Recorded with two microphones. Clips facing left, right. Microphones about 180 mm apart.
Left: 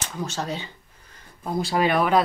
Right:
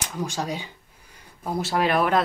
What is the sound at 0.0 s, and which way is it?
Speech, 10° right (ahead or behind).